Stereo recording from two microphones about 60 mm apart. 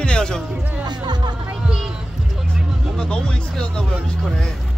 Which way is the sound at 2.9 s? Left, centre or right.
Centre.